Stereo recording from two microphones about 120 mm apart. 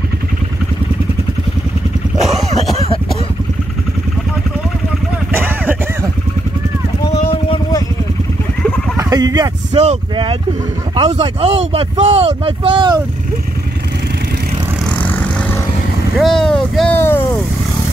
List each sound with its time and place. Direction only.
5.3 s a sound: 15° right (ahead or behind)
7.1 s vehicle: 45° left (ahead or behind)
8.9 s chicken: 30° right (ahead or behind)
9.7 s speech: 50° right (ahead or behind)
11.0 s speech: 60° right (ahead or behind); by 13.0 s 40° right (ahead or behind)
15.0 s vehicle: 15° left (ahead or behind)
16.2 s speech: 5° left (ahead or behind)
16.9 s speech: 20° left (ahead or behind)